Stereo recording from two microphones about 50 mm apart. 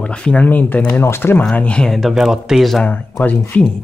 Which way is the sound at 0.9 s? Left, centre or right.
Left.